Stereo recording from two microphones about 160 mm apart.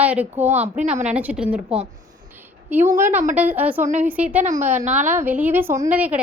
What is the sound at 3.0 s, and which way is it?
A woman's voice, 10° right (ahead or behind).